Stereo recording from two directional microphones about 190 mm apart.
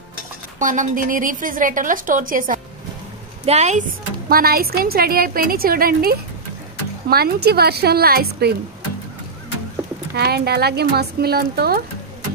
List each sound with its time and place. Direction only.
0.6 s a woman's voice: 45° right (ahead or behind)
4.3 s a woman's voice: 50° right (ahead or behind)
10.1 s speech: 55° right (ahead or behind)